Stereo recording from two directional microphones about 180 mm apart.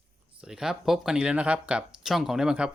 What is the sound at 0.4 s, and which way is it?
Speech, 5° right (ahead or behind).